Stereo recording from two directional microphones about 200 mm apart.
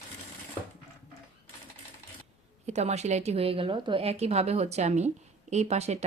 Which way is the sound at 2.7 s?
35° right (ahead or behind).